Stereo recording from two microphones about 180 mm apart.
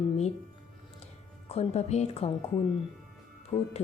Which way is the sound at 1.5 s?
35° left (ahead or behind).